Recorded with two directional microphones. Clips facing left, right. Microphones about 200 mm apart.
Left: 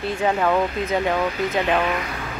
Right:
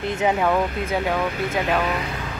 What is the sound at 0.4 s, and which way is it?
Speech, 5° right (ahead or behind).